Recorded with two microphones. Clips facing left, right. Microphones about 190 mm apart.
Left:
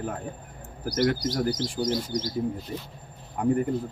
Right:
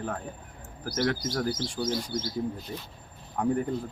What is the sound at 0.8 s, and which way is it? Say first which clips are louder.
Speech: left 4 dB; 15° left (ahead or behind).